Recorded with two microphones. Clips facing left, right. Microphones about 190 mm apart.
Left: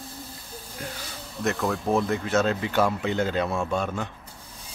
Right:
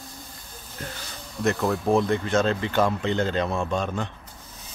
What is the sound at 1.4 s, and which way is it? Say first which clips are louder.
Speech: right 2 dB; centre (ahead or behind).